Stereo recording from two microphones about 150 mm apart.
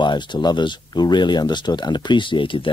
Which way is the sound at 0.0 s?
30° left (ahead or behind).